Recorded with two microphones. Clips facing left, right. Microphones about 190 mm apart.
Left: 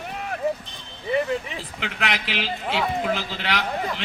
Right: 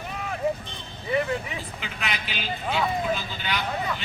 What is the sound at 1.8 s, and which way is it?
A man's voice, 85° left.